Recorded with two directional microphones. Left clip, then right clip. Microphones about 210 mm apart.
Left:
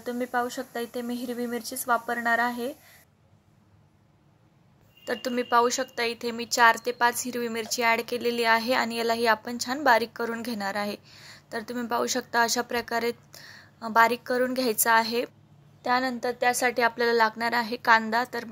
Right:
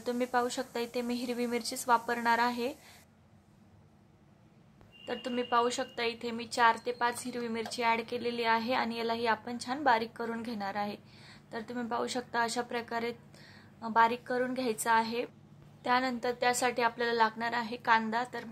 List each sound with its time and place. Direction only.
0.0 s speech: 15° left (ahead or behind)
5.0 s speech: 20° left (ahead or behind)